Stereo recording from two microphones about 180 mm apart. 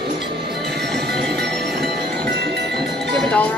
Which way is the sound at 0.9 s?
65° right (ahead or behind).